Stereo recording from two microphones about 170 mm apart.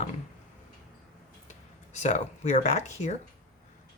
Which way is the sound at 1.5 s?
45° left (ahead or behind).